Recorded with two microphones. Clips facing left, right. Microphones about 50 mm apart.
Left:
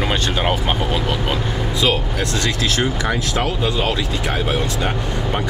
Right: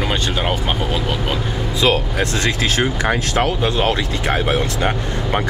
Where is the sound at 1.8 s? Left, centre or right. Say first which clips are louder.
Right 3 dB; right.